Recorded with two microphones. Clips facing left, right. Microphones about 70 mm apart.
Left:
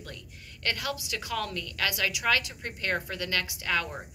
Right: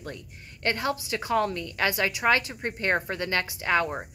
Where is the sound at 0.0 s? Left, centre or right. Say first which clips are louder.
Right 5 dB; right.